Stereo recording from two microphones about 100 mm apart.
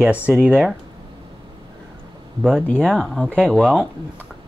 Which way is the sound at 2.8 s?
5° left (ahead or behind).